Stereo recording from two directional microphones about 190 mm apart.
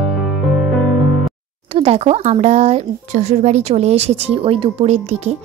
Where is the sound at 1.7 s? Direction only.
30° right (ahead or behind).